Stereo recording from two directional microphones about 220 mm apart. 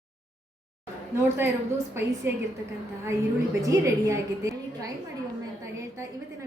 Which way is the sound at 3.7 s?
15° right (ahead or behind).